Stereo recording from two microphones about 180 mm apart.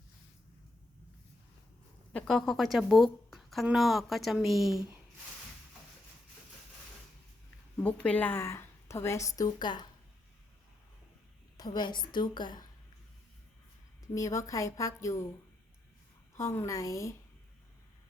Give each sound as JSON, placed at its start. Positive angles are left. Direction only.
{"t": 2.1, "sound": "a woman's voice", "side_deg": 0}
{"t": 7.8, "sound": "a woman's voice", "side_deg": 5}
{"t": 11.5, "sound": "a woman's voice", "side_deg": 20}
{"t": 14.1, "sound": "a woman's voice", "side_deg": 15}
{"t": 16.4, "sound": "a woman's voice", "side_deg": 15}